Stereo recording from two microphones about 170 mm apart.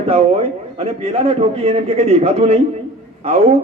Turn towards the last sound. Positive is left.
turn(degrees=-35)  # may be behind; listen again after turning